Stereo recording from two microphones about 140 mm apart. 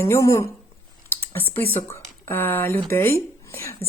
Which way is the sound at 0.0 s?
20° left (ahead or behind).